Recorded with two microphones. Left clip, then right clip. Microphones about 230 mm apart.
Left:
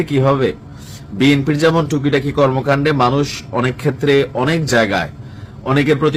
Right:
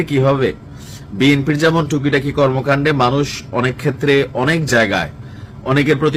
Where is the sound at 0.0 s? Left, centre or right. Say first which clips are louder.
Even; centre.